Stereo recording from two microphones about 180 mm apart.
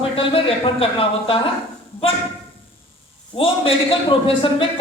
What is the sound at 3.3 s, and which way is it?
A man's voice, 30° left (ahead or behind).